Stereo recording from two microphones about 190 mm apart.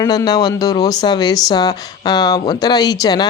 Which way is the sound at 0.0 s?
20° left (ahead or behind).